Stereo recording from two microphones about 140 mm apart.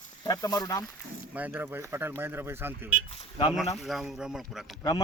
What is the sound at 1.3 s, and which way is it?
Speech, 10° right (ahead or behind).